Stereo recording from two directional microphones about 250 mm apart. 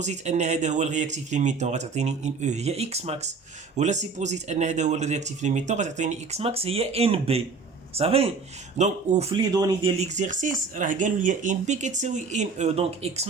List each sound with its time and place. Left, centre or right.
0.0 s speech: right